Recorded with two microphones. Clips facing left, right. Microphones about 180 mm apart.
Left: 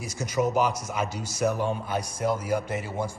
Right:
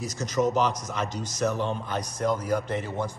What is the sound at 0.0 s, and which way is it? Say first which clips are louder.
A man's voice: right 1 dB; 10° left (ahead or behind).